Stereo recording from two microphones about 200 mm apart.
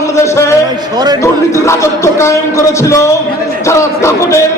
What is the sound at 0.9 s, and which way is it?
Speech, 20° right (ahead or behind).